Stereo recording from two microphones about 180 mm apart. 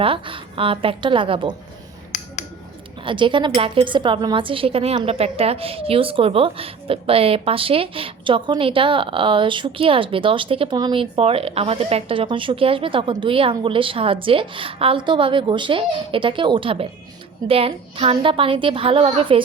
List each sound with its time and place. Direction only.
0.0 s a woman's voice: 30° right (ahead or behind)
2.1 s a sound: 40° left (ahead or behind)
3.0 s a woman's voice: 25° right (ahead or behind)